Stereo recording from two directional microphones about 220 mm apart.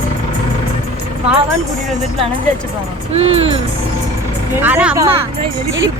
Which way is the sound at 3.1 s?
25° right (ahead or behind).